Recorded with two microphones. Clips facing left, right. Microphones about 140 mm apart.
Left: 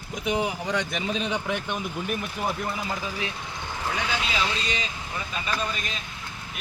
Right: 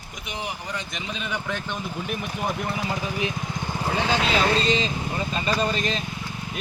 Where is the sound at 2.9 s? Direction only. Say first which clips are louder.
Right 4 dB; 20° right (ahead or behind).